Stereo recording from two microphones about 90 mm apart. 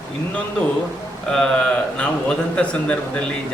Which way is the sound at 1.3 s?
10° left (ahead or behind).